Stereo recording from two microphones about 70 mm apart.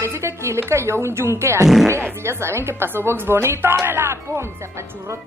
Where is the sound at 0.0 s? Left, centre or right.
Right.